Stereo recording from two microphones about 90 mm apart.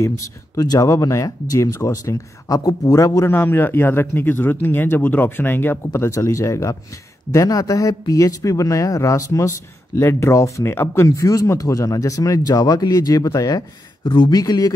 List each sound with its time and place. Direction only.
0.0 s speech: 40° left (ahead or behind)
14.0 s speech: 55° left (ahead or behind)
14.4 s speech: 40° left (ahead or behind)